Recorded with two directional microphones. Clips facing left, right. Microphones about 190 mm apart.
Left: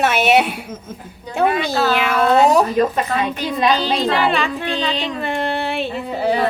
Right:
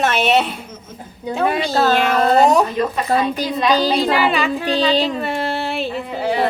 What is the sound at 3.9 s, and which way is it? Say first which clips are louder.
Speech: right 1 dB; 5° right (ahead or behind).